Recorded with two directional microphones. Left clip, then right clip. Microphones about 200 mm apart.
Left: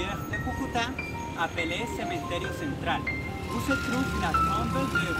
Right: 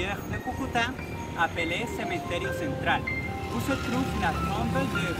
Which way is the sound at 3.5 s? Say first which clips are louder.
Left 2 dB; 30° right (ahead or behind).